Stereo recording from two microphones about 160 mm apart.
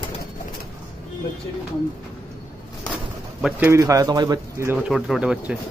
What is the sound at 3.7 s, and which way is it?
Speech, 20° right (ahead or behind).